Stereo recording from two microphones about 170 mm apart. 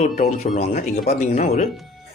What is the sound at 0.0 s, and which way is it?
Speech, 50° left (ahead or behind).